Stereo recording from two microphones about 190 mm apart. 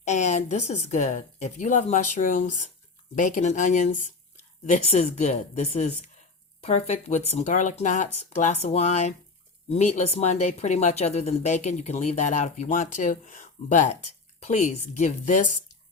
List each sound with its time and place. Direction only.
0.0 s speech: 40° left (ahead or behind)